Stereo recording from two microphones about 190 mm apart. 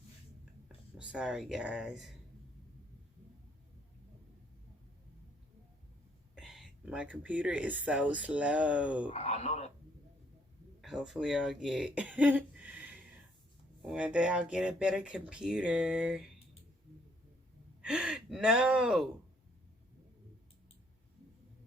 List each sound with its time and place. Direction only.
0.9 s speech: 5° right (ahead or behind)
6.3 s speech: centre (ahead or behind)
9.1 s speech: 35° left (ahead or behind)
10.8 s speech: centre (ahead or behind)
12.5 s a sound: 10° right (ahead or behind)
13.8 s speech: 5° right (ahead or behind)
17.8 s speech: 5° right (ahead or behind)